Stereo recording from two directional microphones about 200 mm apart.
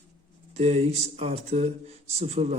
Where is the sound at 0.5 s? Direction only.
30° right (ahead or behind).